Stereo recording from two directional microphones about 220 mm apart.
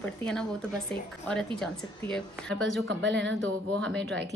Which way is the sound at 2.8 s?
50° right (ahead or behind).